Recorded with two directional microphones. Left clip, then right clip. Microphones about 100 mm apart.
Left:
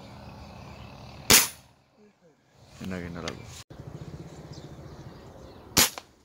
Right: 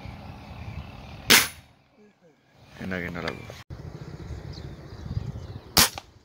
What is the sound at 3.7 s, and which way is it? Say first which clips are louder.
Vehicle: right 1 dB; centre (ahead or behind).